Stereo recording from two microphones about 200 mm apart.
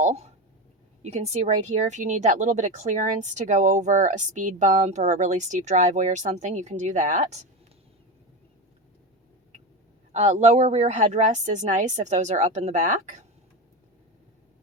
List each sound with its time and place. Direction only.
0.0 s speech: 35° right (ahead or behind)
10.1 s speech: 35° right (ahead or behind)